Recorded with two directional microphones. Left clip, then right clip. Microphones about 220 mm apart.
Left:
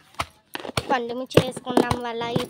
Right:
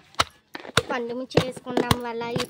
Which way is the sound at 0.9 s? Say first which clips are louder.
Left 4 dB; 5° left (ahead or behind).